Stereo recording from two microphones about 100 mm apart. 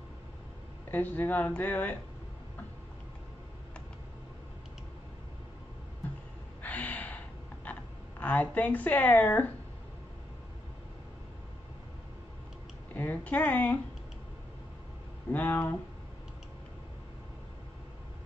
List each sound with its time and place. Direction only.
0.9 s speech: 20° left (ahead or behind)
6.6 s gasp: 15° left (ahead or behind)
8.2 s speech: 15° left (ahead or behind)
12.9 s speech: 15° left (ahead or behind)
15.3 s speech: 15° left (ahead or behind)